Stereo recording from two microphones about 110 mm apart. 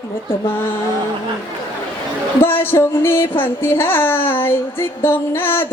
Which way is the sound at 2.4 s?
20° left (ahead or behind).